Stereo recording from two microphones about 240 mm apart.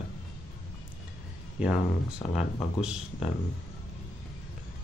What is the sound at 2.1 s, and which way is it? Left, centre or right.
Speech, centre.